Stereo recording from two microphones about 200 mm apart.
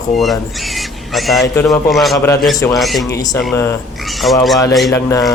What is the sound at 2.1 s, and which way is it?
Mantra, 15° left (ahead or behind).